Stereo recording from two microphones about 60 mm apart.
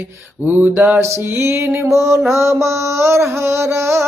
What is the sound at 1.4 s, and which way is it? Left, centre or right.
Music, right.